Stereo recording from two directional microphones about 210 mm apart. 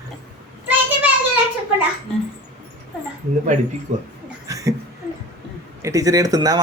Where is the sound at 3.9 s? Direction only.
35° right (ahead or behind).